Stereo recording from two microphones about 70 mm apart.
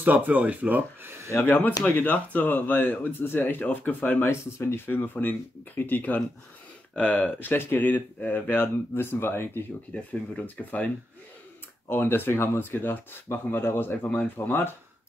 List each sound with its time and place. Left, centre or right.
0.0 s speech: right
1.3 s speech: left
4.3 s speech: left
4.8 s speech: left
9.9 s speech: left
11.9 s speech: left